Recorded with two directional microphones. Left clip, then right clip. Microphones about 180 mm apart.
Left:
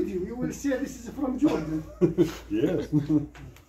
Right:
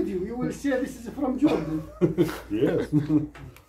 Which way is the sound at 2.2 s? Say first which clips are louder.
Right 1 dB; 25° right (ahead or behind).